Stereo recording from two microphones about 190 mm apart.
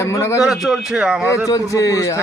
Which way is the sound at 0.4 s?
Centre (ahead or behind).